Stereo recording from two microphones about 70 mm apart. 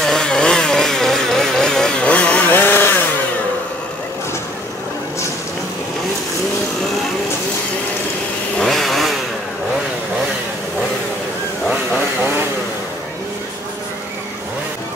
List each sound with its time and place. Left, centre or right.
0.0 s chainsaw: centre
2.5 s chainsaw: left
8.5 s chainsaw: centre